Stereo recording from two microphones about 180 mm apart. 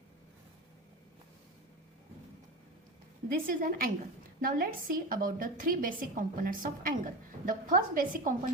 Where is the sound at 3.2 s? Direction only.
50° right (ahead or behind).